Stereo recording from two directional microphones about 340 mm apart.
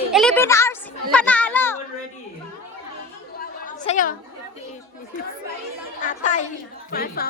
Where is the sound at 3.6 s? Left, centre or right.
Left.